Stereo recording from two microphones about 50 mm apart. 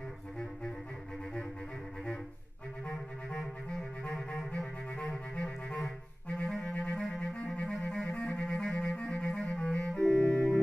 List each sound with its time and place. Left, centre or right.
2.9 s clarinet: centre
10.1 s music: left